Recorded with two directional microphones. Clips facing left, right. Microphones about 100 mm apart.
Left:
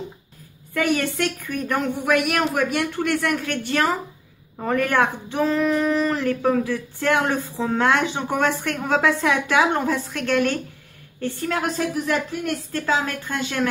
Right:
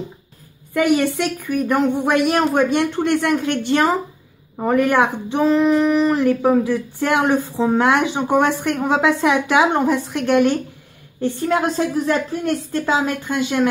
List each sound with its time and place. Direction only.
0.7 s speech: 15° right (ahead or behind)
2.0 s a woman's voice: 30° right (ahead or behind)
12.7 s speech: 20° right (ahead or behind)